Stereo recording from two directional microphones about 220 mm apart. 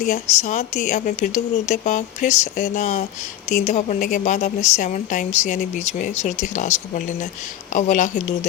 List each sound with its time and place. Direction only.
0.0 s a woman's voice: 35° left (ahead or behind)